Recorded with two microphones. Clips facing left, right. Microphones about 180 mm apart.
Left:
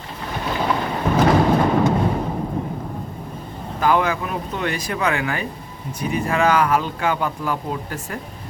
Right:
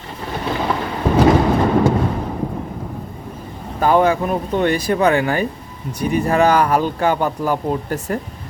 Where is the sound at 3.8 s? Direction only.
30° right (ahead or behind).